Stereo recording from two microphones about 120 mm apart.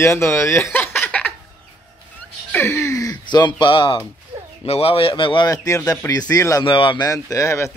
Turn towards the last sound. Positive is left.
turn(degrees=25)  # may be behind; listen again after turning